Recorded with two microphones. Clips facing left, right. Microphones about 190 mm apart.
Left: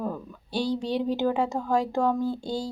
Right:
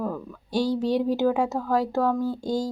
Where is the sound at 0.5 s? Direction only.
10° right (ahead or behind).